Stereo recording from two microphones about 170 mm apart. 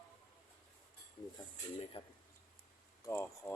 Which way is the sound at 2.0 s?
30° left (ahead or behind).